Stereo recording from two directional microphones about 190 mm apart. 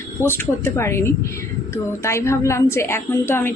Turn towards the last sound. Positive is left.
turn(degrees=10)  # may be behind; listen again after turning